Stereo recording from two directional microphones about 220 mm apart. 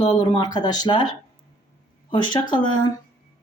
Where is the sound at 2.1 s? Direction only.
20° left (ahead or behind).